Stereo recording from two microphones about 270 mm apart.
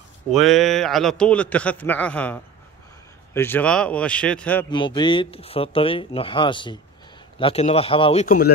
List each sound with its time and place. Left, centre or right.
0.3 s a man's voice: centre
4.6 s speech: centre; by 8.5 s left